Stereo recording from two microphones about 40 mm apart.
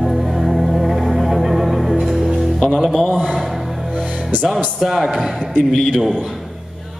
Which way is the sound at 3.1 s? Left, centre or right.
Right.